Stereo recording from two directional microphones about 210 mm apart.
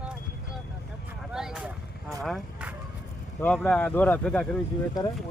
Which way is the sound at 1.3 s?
5° right (ahead or behind).